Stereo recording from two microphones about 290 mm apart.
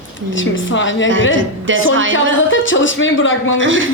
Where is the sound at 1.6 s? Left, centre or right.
Right.